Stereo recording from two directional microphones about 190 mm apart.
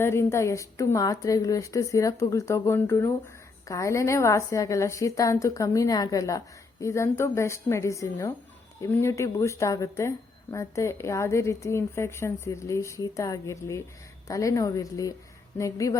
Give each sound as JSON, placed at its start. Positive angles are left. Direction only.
{"t": 0.0, "sound": "speech", "side_deg": 15}